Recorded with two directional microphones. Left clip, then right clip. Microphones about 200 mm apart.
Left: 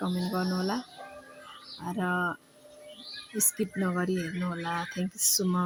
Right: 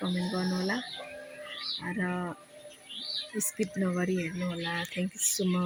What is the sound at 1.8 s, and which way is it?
Speech, 5° left (ahead or behind).